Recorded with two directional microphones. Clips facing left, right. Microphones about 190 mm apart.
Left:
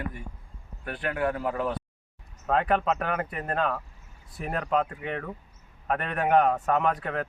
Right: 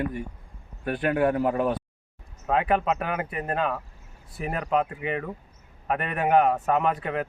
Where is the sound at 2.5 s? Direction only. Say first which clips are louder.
Right 1 dB; 5° right (ahead or behind).